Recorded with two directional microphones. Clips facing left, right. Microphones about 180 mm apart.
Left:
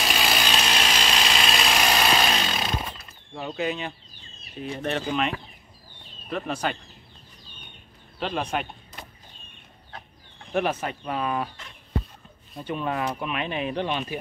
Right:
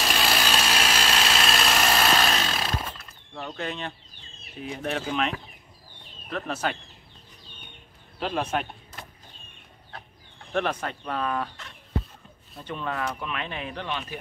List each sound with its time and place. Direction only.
0.0 s tools: centre (ahead or behind)
4.6 s speech: 5° right (ahead or behind)
8.2 s speech: 5° right (ahead or behind)
10.5 s speech: 10° left (ahead or behind)